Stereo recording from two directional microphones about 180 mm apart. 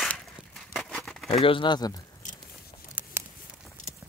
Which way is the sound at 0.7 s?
5° left (ahead or behind).